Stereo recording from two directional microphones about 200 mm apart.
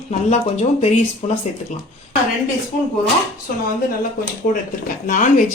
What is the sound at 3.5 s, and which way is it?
Speech, 45° left (ahead or behind).